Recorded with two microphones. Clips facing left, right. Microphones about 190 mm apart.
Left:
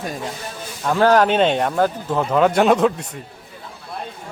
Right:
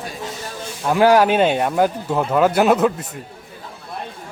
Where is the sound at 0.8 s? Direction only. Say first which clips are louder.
Right 1 dB; 10° right (ahead or behind).